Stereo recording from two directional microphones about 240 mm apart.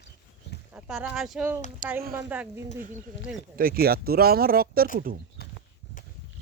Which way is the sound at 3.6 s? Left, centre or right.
Right.